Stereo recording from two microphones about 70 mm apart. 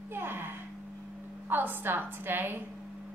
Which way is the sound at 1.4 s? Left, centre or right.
Right.